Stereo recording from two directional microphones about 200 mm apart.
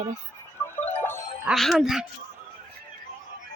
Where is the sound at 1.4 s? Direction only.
Centre (ahead or behind).